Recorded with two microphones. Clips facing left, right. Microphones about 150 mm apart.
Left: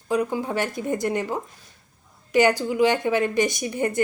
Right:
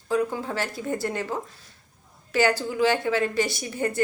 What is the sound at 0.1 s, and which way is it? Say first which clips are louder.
Speech: left 2 dB; 15° left (ahead or behind).